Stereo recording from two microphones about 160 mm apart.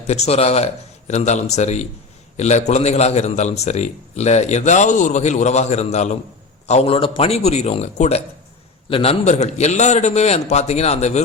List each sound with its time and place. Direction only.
0.1 s a man's voice: 40° left (ahead or behind)